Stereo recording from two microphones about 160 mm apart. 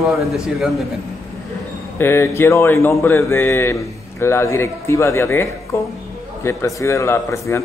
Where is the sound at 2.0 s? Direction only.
15° left (ahead or behind).